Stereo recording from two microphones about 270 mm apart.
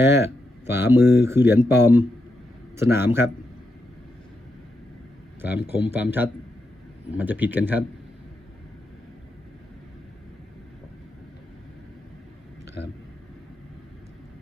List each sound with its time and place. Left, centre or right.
0.7 s speech: centre
5.4 s speech: centre